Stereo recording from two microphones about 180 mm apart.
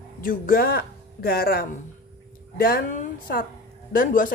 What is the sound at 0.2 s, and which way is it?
A woman's voice, 50° left (ahead or behind).